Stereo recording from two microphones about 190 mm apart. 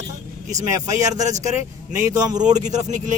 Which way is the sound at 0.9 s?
20° right (ahead or behind).